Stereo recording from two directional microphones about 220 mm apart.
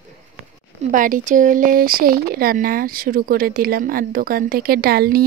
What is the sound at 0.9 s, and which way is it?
Speech, 35° right (ahead or behind).